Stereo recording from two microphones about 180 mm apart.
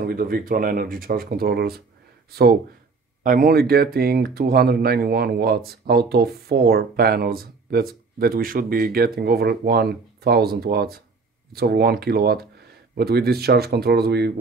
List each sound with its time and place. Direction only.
0.0 s speech: 55° right (ahead or behind)
3.3 s speech: 55° right (ahead or behind)